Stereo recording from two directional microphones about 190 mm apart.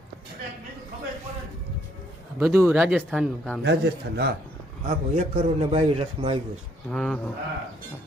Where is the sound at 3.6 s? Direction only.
60° right (ahead or behind).